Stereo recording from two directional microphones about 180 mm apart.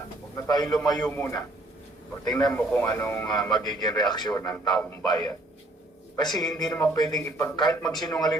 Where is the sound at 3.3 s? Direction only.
20° left (ahead or behind).